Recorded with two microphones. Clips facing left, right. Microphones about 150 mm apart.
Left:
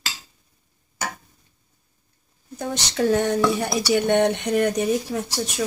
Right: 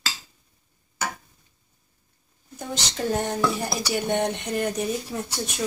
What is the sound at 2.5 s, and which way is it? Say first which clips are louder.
Speech: left 5 dB; 75° left (ahead or behind).